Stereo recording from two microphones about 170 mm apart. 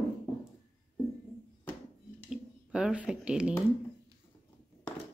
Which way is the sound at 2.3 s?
5° right (ahead or behind).